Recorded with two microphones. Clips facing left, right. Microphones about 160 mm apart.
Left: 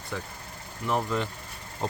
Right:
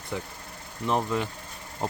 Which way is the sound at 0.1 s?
15° right (ahead or behind).